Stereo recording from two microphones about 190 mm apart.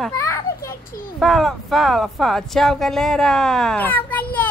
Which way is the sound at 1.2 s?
Centre (ahead or behind).